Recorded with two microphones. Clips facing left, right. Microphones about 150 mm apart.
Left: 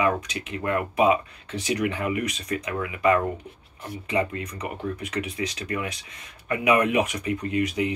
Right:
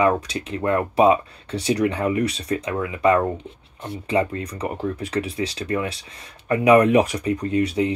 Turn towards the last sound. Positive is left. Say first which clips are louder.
# right 4 dB
turn(degrees=-30)  # may be behind; listen again after turning